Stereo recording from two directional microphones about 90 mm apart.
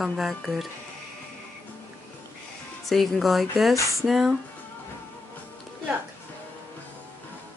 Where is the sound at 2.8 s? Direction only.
Centre (ahead or behind).